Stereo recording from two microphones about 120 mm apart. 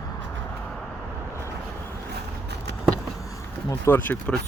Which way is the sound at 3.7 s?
20° left (ahead or behind).